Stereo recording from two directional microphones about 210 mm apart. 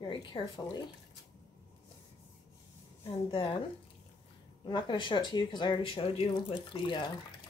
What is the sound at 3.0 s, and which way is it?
Speech, 25° left (ahead or behind).